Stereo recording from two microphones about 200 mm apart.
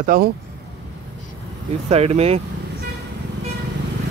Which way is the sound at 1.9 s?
30° right (ahead or behind).